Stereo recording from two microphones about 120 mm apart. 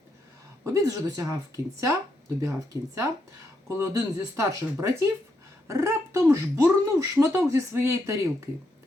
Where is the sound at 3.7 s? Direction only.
25° right (ahead or behind).